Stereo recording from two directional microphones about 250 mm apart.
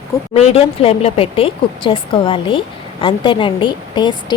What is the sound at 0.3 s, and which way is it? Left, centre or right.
A woman's voice, left.